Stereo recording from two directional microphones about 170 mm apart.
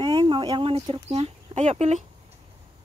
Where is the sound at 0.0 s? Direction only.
30° right (ahead or behind).